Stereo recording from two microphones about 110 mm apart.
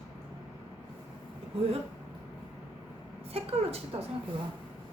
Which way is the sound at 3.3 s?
65° right (ahead or behind).